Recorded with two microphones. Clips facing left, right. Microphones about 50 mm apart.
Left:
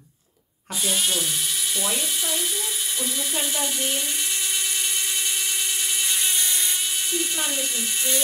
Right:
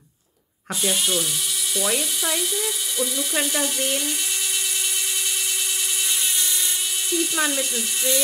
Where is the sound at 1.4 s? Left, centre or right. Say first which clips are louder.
Right 1 dB; left.